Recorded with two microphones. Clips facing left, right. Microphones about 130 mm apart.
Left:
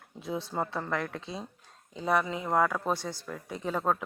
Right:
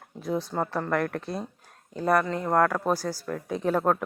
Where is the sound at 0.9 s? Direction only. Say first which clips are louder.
Right 8 dB; 60° right (ahead or behind).